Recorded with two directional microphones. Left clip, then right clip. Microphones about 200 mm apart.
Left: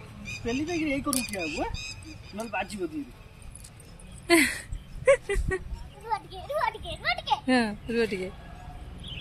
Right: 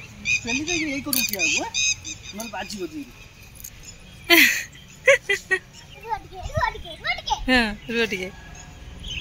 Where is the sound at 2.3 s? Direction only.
Centre (ahead or behind).